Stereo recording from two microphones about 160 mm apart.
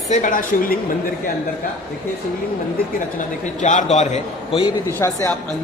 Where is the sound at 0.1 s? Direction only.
55° left (ahead or behind).